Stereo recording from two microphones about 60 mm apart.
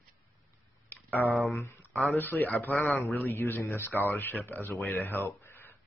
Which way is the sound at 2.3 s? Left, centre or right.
Left.